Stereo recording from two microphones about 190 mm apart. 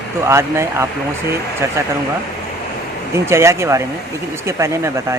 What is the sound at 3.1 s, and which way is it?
Speech, 15° right (ahead or behind).